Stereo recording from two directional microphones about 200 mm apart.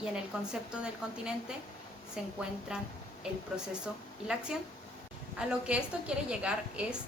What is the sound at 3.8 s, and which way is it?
A woman's voice, 5° right (ahead or behind).